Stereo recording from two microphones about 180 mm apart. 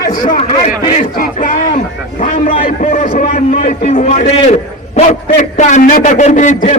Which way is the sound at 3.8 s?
35° left (ahead or behind).